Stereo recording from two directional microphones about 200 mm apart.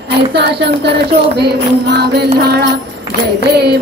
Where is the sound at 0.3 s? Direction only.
55° right (ahead or behind).